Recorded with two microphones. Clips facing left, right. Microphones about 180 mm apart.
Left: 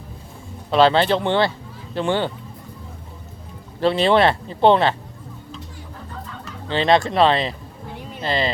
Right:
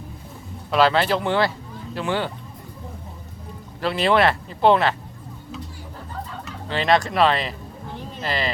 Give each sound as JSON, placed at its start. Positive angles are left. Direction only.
{"t": 0.7, "sound": "speech", "side_deg": 25}
{"t": 3.8, "sound": "speech", "side_deg": 30}
{"t": 6.7, "sound": "speech", "side_deg": 30}